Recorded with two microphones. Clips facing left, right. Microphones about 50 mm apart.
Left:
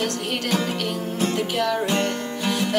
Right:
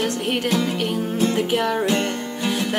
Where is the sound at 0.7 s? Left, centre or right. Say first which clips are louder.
Right 3 dB; centre.